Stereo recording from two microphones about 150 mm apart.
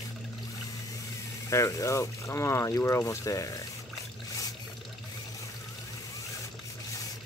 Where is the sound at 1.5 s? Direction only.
20° left (ahead or behind).